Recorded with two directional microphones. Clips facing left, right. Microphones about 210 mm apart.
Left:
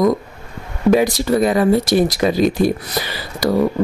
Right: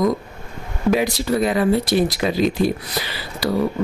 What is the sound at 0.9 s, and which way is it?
Speech, 40° left (ahead or behind).